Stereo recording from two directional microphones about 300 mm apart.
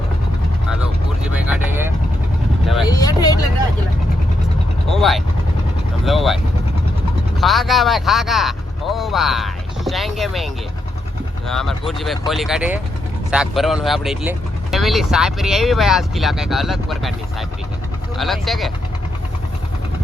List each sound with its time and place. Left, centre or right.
1.2 s vehicle: centre
2.8 s vehicle: centre
4.9 s vehicle: centre
7.4 s vehicle: centre
11.4 s speech: centre